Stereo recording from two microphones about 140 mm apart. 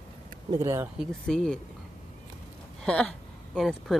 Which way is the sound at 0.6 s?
20° right (ahead or behind).